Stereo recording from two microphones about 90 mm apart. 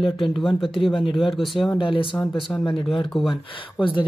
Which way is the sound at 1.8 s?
75° left (ahead or behind).